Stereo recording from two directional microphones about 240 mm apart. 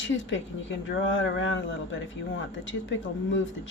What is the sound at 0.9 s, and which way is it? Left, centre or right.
Speech, left.